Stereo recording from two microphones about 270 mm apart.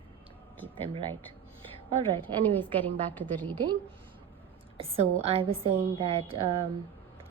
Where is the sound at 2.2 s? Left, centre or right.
Centre.